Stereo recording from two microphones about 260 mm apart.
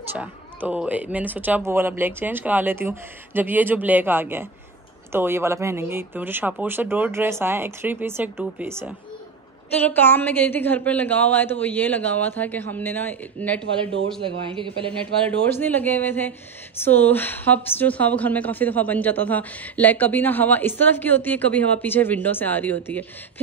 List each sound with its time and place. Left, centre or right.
0.1 s speech: centre
9.8 s a woman's voice: centre
14.2 s speech: centre
15.2 s a woman's voice: centre